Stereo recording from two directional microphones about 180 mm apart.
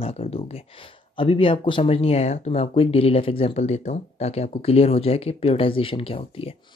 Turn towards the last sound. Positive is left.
turn(degrees=30)  # may be behind; listen again after turning